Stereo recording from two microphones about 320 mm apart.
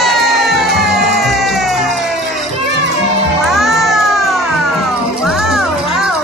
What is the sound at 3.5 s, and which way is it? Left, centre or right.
Music, centre.